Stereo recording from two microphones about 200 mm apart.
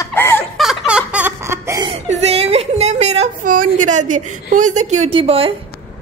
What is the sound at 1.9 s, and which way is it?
Whimper, 30° right (ahead or behind).